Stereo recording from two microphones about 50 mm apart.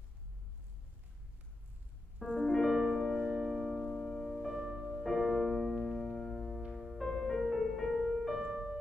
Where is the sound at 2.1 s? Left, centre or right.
Centre.